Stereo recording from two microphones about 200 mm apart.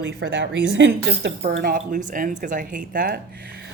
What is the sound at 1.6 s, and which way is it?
A woman's voice, 45° right (ahead or behind).